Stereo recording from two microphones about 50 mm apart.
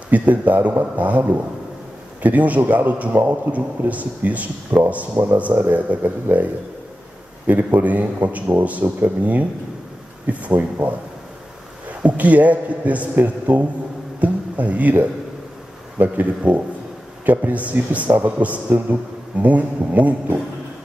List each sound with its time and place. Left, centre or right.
0.1 s speech: right
3.2 s a man's voice: right
3.9 s speech: right
12.0 s a man's voice: right